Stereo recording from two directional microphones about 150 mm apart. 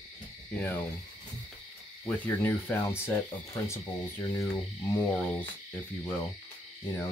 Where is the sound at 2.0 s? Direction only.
15° left (ahead or behind).